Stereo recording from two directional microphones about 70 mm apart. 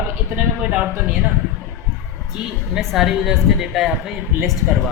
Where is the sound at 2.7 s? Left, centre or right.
Centre.